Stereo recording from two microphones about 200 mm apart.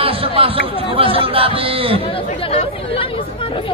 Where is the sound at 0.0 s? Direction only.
30° right (ahead or behind).